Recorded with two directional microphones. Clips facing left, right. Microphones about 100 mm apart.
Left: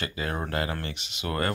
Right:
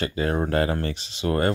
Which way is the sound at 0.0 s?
35° right (ahead or behind).